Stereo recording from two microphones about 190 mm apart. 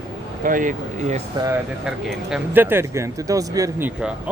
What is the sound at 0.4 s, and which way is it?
Speech, 45° right (ahead or behind).